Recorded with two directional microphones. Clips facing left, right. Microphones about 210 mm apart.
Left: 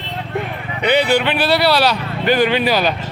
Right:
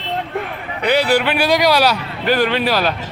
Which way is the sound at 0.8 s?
Centre (ahead or behind).